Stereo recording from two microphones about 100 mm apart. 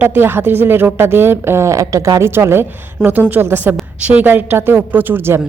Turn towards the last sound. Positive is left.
turn(degrees=-25)  # may be behind; listen again after turning